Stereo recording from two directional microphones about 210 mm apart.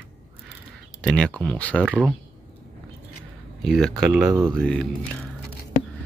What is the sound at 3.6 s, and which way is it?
Speech, centre (ahead or behind).